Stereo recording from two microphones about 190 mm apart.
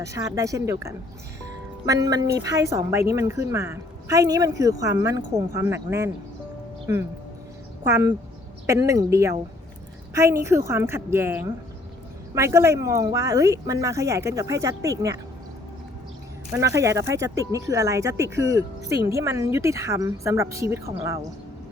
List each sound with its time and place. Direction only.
0.0 s speech: 15° right (ahead or behind)
7.9 s speech: 10° right (ahead or behind)
16.5 s speech: 15° right (ahead or behind)